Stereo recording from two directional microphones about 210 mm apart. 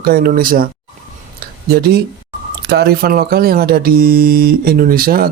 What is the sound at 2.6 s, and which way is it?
Speech, 50° right (ahead or behind).